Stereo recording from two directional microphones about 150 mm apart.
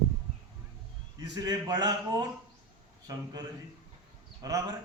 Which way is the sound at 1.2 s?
25° right (ahead or behind).